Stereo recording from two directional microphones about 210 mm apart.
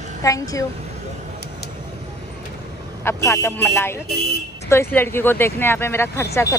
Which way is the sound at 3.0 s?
15° left (ahead or behind).